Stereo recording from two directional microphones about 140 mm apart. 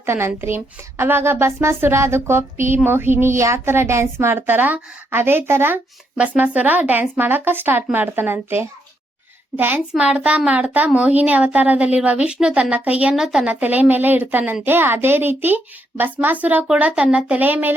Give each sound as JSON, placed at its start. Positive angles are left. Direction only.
{"t": 0.0, "sound": "a woman's voice", "side_deg": -15}